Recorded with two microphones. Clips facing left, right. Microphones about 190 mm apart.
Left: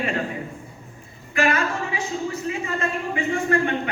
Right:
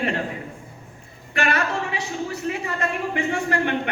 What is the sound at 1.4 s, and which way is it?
Speech, 70° right (ahead or behind).